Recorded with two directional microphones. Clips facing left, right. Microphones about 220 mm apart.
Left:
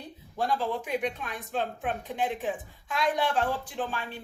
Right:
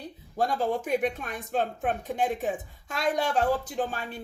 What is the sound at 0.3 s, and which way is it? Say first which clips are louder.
Speech: right 2 dB; 45° right (ahead or behind).